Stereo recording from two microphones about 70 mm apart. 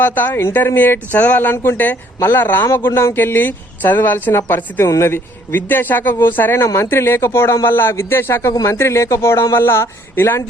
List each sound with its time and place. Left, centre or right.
0.0 s speech: left
6.6 s speech: left